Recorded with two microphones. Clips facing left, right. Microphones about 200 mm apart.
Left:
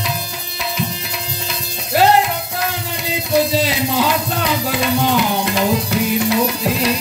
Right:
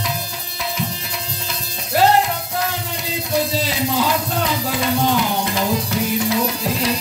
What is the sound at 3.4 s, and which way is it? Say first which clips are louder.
Music: left 4 dB; 70° left (ahead or behind).